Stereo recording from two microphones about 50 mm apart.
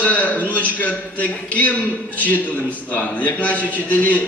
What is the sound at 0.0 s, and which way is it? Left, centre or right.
A man's voice, left.